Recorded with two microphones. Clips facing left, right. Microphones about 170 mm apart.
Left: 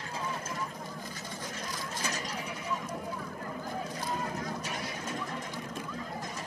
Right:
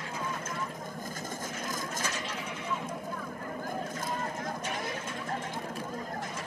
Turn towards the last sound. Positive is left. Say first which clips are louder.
# even
turn(degrees=-50)  # may be behind; listen again after turning